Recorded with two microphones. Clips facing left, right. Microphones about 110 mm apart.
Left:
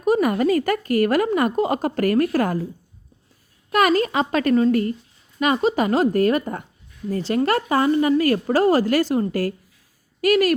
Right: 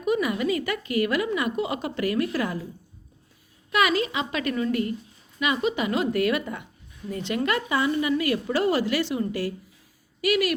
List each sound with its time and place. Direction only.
0.0 s a woman's voice: 45° left (ahead or behind)
3.7 s a woman's voice: 45° left (ahead or behind)